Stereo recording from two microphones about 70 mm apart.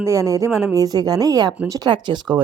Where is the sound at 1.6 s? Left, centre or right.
Right.